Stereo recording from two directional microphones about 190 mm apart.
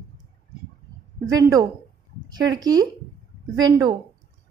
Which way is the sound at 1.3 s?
20° right (ahead or behind).